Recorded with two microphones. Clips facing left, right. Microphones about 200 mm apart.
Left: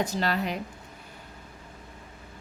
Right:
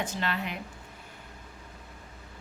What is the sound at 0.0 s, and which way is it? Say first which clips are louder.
Speech: left 5 dB; 40° left (ahead or behind).